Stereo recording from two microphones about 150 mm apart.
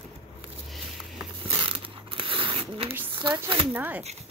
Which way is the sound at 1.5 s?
35° right (ahead or behind).